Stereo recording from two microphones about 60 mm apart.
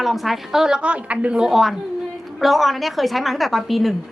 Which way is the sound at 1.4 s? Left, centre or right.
Centre.